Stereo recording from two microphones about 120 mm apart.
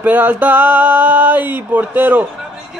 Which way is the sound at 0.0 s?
15° right (ahead or behind).